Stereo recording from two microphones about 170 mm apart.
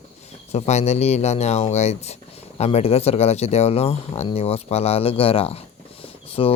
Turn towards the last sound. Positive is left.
turn(degrees=35)  # may be behind; listen again after turning